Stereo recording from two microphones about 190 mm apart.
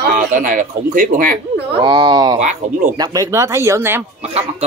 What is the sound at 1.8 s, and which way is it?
Speech, 25° right (ahead or behind).